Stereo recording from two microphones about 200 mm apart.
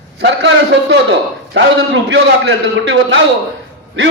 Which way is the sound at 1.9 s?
65° right (ahead or behind).